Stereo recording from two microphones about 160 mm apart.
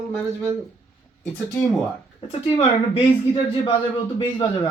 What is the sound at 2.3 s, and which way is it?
Speech, 35° left (ahead or behind).